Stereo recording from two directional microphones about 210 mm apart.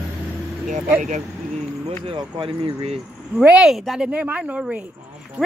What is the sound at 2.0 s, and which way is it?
Speech, 25° right (ahead or behind).